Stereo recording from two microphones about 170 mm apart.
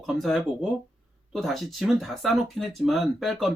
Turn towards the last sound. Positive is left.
turn(degrees=0)  # may be behind; listen again after turning